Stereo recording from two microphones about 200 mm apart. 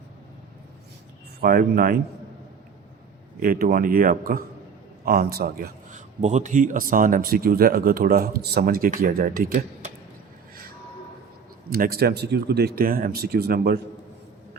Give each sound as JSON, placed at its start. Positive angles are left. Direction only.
{"t": 1.4, "sound": "speech", "side_deg": -50}
{"t": 3.4, "sound": "speech", "side_deg": -45}
{"t": 6.2, "sound": "speech", "side_deg": -35}
{"t": 11.7, "sound": "speech", "side_deg": -50}